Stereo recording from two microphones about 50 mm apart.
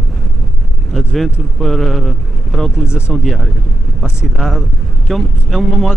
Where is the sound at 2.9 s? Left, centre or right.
Left.